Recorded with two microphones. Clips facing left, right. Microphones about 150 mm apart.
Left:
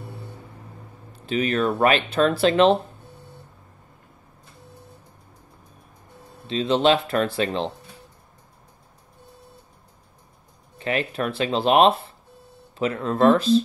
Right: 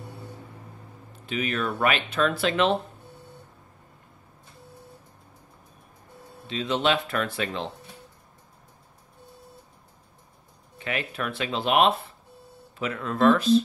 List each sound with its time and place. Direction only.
1.2 s speech: 35° left (ahead or behind)
6.4 s speech: 30° left (ahead or behind)
10.8 s speech: 30° left (ahead or behind)